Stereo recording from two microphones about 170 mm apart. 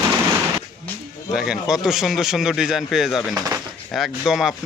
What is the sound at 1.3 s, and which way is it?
A man's voice, 5° right (ahead or behind).